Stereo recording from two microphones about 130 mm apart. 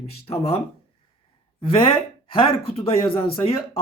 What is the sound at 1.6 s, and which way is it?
Speech, 40° left (ahead or behind).